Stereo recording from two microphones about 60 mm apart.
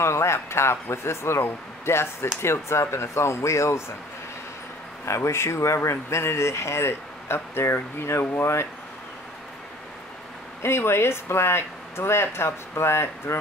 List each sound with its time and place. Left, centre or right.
0.0 s speech: left
5.0 s speech: left
10.6 s speech: left